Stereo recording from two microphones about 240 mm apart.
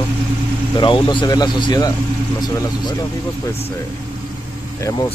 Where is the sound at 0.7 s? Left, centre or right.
Centre.